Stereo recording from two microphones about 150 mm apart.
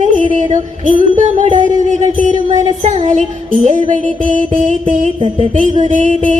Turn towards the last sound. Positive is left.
turn(degrees=-55)  # may be behind; listen again after turning